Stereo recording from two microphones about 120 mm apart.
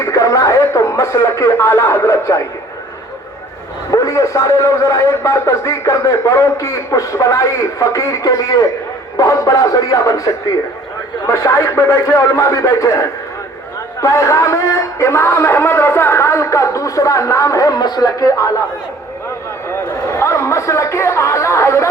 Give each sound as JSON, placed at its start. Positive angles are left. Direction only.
{"t": 0.0, "sound": "speech", "side_deg": 25}
{"t": 3.9, "sound": "a man's voice", "side_deg": 25}
{"t": 19.6, "sound": "chatter", "side_deg": 20}